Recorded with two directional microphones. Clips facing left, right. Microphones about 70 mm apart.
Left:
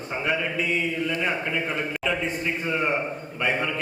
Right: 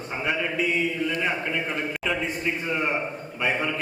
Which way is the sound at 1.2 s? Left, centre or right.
Centre.